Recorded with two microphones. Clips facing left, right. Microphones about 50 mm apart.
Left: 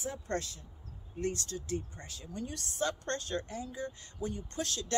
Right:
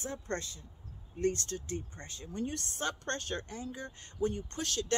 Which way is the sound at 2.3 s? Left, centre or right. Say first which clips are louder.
Right 4 dB; right.